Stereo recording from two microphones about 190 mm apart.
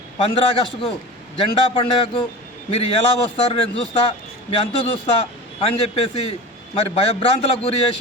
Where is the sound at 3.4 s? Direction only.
30° left (ahead or behind).